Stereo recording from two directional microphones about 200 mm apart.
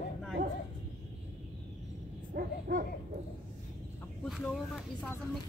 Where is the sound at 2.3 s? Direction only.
45° right (ahead or behind).